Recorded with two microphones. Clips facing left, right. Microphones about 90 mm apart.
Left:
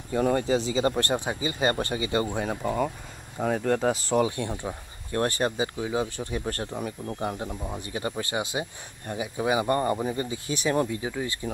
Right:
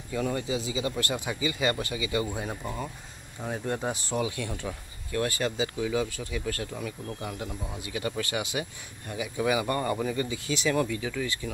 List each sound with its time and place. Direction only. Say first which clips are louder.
0.1 s speech: left 6 dB; 45° left (ahead or behind)
2.3 s speech: left 5 dB; 55° left (ahead or behind)
3.3 s speech: left 7 dB; 75° left (ahead or behind)
3.9 s speech: left 6 dB; 35° left (ahead or behind)
4.5 s speech: left 3 dB; 20° left (ahead or behind)
5.1 s speech: left 3 dB; 35° left (ahead or behind)